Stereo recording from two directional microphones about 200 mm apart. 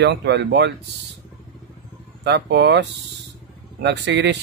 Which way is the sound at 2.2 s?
60° right (ahead or behind).